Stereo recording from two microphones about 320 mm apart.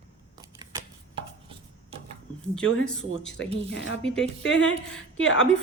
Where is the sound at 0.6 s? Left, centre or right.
Centre.